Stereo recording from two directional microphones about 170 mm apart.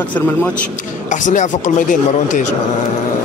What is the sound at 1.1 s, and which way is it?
Speech, 45° left (ahead or behind).